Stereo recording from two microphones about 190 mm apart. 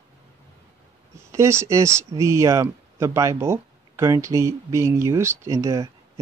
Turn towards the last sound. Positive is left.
turn(degrees=-15)  # may be behind; listen again after turning